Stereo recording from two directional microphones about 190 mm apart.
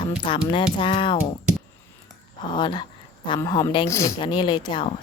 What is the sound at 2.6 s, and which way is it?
Speech, 25° left (ahead or behind).